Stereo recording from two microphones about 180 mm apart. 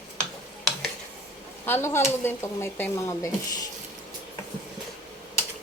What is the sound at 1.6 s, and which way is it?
Speech, 15° left (ahead or behind).